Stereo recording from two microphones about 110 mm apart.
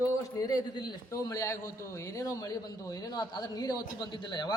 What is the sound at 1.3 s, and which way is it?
Speech, 25° left (ahead or behind).